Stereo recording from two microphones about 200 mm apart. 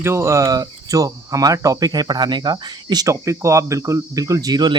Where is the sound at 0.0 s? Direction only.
15° right (ahead or behind).